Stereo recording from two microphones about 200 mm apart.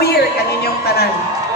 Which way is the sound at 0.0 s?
55° left (ahead or behind).